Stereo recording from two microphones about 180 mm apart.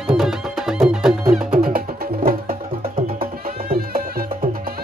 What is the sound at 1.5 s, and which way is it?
Music, 55° right (ahead or behind).